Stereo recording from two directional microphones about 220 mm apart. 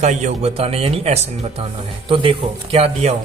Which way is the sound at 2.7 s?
30° right (ahead or behind).